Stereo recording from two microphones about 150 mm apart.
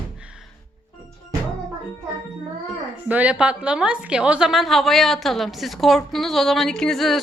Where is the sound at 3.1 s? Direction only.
10° right (ahead or behind).